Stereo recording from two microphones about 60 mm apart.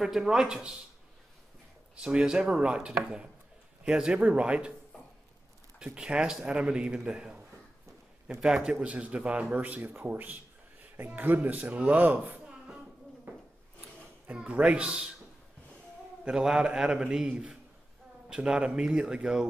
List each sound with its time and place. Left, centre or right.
0.0 s a man's voice: centre
2.0 s a man's voice: centre
5.9 s a man's voice: centre; by 12.4 s right
12.4 s a sound: centre
14.2 s a man's voice: right
16.3 s a man's voice: centre